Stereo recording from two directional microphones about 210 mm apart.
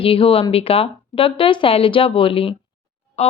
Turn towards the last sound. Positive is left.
turn(degrees=30)  # may be behind; listen again after turning